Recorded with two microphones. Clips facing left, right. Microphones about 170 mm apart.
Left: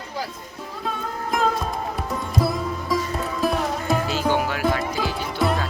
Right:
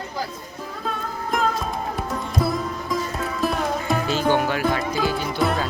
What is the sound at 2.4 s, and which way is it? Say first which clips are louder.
Music: right 1 dB; 5° left (ahead or behind).